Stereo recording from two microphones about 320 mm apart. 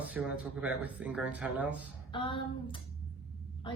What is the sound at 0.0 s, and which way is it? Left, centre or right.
Speech, centre.